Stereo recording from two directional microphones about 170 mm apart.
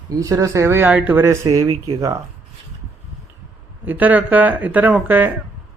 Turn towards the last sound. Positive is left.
turn(degrees=-10)  # may be behind; listen again after turning